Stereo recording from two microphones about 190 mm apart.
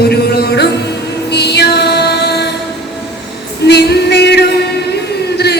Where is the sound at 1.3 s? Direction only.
60° left (ahead or behind).